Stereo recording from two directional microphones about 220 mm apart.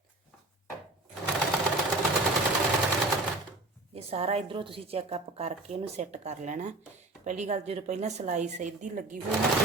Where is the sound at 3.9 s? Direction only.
25° right (ahead or behind).